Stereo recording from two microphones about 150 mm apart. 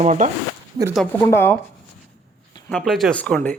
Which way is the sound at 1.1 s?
15° left (ahead or behind).